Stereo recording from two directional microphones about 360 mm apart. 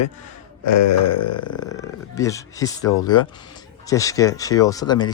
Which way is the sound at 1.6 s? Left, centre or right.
Centre.